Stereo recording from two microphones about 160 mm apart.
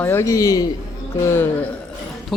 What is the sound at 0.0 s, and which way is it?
A man's voice, 15° left (ahead or behind).